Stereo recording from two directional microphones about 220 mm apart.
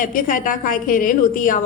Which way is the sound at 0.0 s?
40° left (ahead or behind).